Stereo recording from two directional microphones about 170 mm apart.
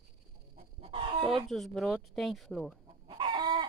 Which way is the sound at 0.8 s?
35° right (ahead or behind).